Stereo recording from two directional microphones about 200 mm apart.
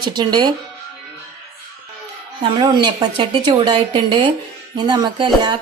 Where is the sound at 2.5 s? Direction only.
20° right (ahead or behind).